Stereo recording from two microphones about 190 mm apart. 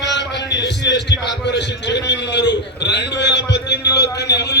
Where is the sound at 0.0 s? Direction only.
65° left (ahead or behind).